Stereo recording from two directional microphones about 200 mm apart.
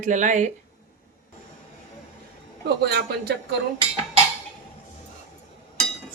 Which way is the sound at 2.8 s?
55° right (ahead or behind).